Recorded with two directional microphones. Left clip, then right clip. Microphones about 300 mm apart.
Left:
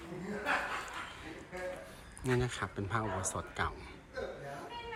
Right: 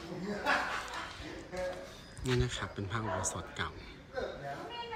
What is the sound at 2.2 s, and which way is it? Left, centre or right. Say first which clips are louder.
Speech: even; centre.